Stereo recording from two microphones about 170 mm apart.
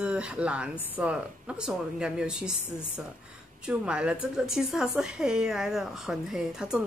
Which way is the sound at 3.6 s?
5° right (ahead or behind).